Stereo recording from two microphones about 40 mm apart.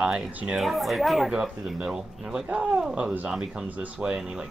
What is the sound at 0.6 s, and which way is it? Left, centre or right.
Speech, centre.